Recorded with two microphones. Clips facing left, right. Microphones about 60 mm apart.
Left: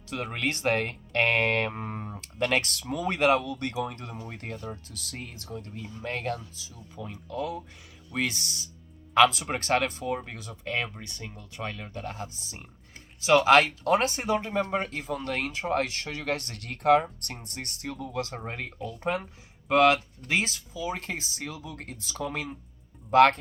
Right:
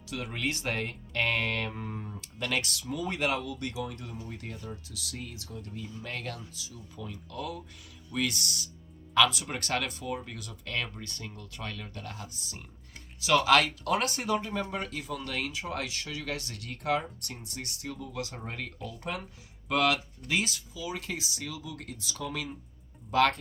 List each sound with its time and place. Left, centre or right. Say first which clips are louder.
0.1 s speech: left 3 dB; left
10.8 s speech: left 1 dB; centre
11.5 s speech: left 5 dB; left
18.1 s speech: left 4 dB; left